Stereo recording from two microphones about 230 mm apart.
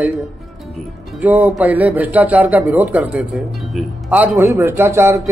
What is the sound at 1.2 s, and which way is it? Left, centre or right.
Speech, centre.